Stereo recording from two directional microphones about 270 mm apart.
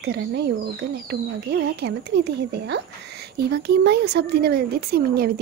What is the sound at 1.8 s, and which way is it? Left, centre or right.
Speech, right.